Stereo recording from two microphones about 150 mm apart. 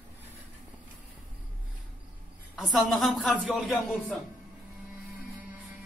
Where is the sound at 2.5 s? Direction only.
Centre (ahead or behind).